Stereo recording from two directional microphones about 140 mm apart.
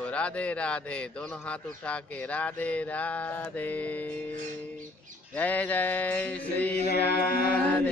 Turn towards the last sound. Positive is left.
turn(degrees=90)